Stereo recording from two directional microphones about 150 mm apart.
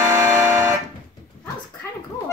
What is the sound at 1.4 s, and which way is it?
Dog, 10° left (ahead or behind).